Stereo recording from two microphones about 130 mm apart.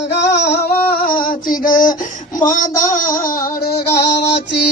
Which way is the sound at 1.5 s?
90° left.